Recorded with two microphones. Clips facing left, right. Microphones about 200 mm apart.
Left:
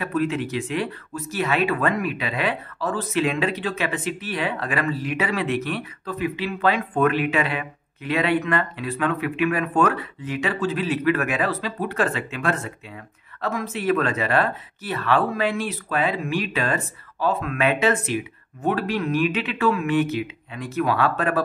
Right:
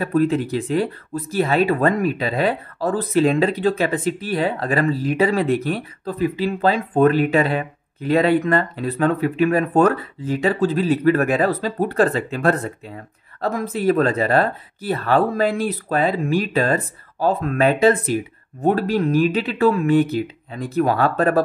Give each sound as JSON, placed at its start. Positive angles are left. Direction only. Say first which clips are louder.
{"t": 0.0, "sound": "speech", "louder": "right 5 dB", "side_deg": -35}